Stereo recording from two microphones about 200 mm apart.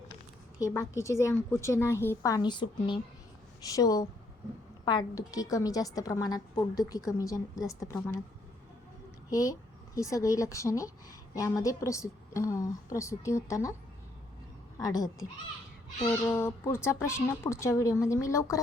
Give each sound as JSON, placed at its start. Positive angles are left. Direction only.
{"t": 0.6, "sound": "speech", "side_deg": 15}
{"t": 9.3, "sound": "speech", "side_deg": 15}
{"t": 14.8, "sound": "speech", "side_deg": 20}
{"t": 16.0, "sound": "speech", "side_deg": 10}